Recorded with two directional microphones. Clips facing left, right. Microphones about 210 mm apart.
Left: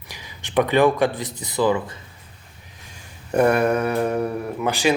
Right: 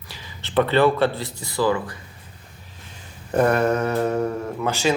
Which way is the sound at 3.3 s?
10° left (ahead or behind).